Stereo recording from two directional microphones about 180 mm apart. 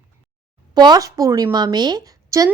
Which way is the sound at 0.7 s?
25° right (ahead or behind).